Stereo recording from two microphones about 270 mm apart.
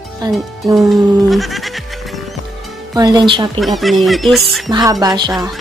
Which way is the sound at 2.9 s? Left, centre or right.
Centre.